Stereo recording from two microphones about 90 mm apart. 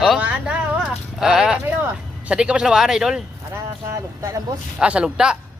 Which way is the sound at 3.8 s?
35° right (ahead or behind).